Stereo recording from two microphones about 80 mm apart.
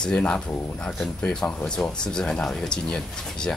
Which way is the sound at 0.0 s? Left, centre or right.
Centre.